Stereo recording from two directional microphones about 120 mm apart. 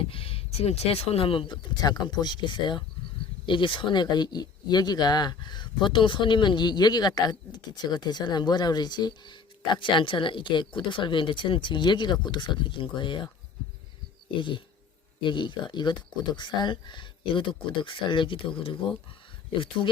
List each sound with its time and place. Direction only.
0.0 s speech: 50° left (ahead or behind)
14.3 s speech: 45° left (ahead or behind)